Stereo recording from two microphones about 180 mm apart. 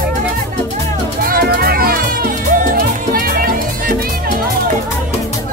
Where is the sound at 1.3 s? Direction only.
55° right (ahead or behind).